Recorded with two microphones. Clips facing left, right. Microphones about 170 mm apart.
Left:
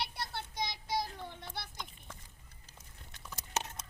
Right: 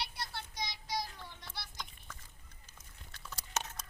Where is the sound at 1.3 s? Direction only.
55° left (ahead or behind).